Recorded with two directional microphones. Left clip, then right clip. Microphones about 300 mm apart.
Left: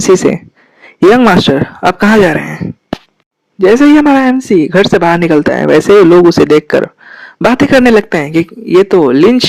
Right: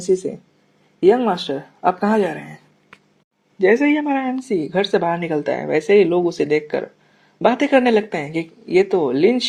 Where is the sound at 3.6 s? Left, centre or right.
Left.